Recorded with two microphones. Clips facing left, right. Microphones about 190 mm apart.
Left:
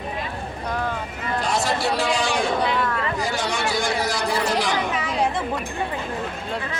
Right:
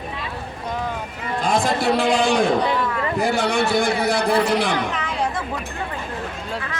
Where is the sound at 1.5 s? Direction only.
55° right (ahead or behind).